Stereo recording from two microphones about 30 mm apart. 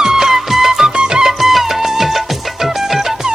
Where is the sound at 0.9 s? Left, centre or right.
Right.